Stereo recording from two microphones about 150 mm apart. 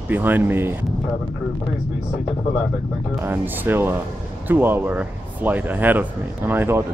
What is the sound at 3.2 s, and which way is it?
Speech, 15° right (ahead or behind).